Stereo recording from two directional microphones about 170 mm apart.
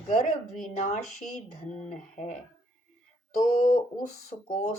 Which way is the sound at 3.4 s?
45° left (ahead or behind).